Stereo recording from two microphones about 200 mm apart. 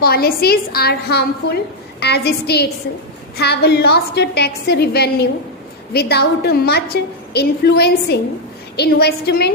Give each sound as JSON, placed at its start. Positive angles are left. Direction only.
{"t": 0.0, "sound": "a woman's voice", "side_deg": 50}